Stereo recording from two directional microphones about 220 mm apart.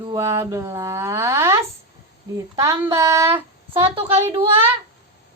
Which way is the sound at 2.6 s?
15° right (ahead or behind).